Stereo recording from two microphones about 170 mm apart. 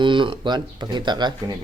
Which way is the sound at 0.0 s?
30° right (ahead or behind).